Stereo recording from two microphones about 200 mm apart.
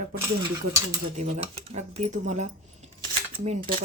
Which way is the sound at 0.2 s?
15° right (ahead or behind).